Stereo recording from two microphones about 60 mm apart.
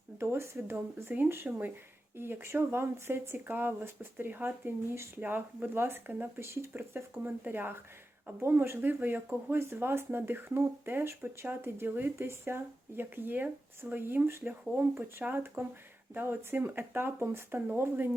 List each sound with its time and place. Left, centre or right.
0.2 s speech: right
1.1 s speech: right
6.4 s speech: right